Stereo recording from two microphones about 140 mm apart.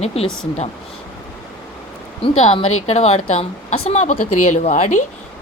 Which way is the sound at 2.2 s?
45° left (ahead or behind).